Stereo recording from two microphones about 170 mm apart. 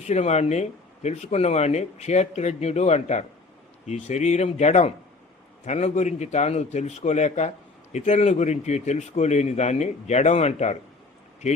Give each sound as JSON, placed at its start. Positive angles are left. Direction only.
{"t": 0.0, "sound": "speech", "side_deg": 40}